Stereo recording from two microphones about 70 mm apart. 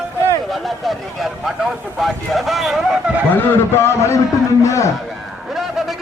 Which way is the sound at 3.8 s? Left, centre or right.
Left.